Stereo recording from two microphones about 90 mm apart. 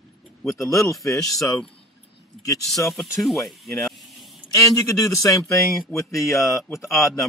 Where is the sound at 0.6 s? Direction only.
35° left (ahead or behind).